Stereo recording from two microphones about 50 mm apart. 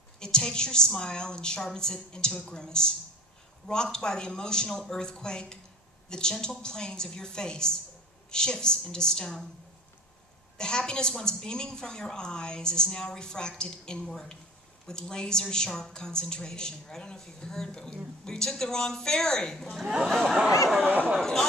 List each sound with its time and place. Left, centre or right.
0.2 s a woman's voice: centre
10.6 s a woman's voice: centre
19.8 s speech: centre
20.1 s a woman's voice: centre
20.8 s speech: right
21.2 s a woman's voice: centre